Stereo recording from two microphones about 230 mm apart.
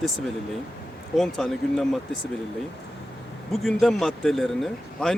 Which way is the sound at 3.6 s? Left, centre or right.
Centre.